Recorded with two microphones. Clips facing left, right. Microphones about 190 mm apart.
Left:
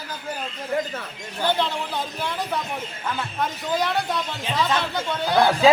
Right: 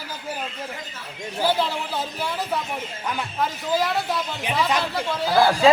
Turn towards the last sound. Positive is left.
turn(degrees=0)  # may be behind; listen again after turning